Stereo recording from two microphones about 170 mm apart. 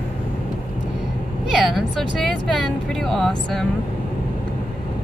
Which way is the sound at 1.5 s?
Centre (ahead or behind).